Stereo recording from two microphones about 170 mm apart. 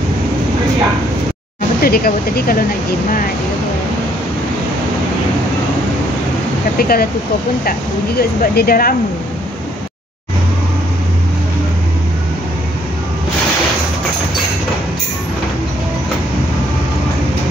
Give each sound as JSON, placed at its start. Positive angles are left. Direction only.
{"t": 1.8, "sound": "speech", "side_deg": 60}
{"t": 6.8, "sound": "speech", "side_deg": 60}
{"t": 8.2, "sound": "speech", "side_deg": 65}